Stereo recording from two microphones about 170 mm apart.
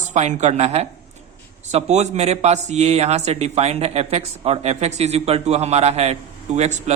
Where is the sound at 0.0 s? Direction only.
45° right (ahead or behind).